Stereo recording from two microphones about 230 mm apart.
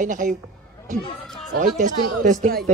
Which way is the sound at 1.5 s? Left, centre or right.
Right.